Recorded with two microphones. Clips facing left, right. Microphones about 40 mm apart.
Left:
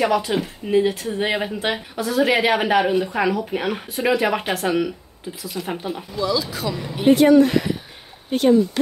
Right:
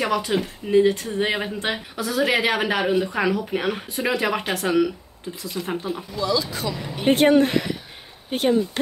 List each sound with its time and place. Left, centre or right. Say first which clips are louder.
0.0 s a woman's voice: left 3 dB; centre
7.2 s speech: left 2 dB; right
8.3 s speech: left 4 dB; centre